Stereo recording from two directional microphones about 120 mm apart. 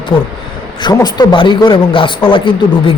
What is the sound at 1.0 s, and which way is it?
Speech, 35° left (ahead or behind).